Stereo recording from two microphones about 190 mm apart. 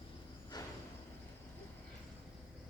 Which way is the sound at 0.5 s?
20° left (ahead or behind).